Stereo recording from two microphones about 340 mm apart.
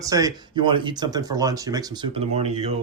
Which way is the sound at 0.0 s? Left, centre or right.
Centre.